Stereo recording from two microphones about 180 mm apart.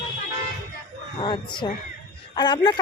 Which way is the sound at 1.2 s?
25° left (ahead or behind).